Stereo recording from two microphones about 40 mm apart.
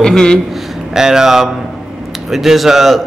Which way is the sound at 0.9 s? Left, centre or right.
Centre.